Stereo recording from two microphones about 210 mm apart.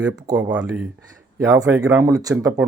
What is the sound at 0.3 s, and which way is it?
Speech, 20° right (ahead or behind).